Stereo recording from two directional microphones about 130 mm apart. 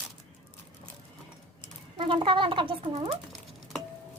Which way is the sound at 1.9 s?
40° right (ahead or behind).